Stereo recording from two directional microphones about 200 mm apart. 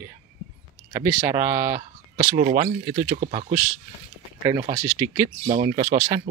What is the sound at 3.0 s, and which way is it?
Speech, 40° right (ahead or behind).